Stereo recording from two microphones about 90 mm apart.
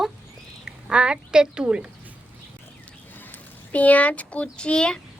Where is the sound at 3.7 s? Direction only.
15° left (ahead or behind).